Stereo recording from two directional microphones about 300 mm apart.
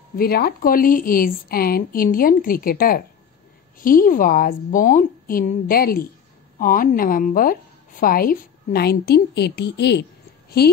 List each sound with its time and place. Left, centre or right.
0.2 s a woman's voice: left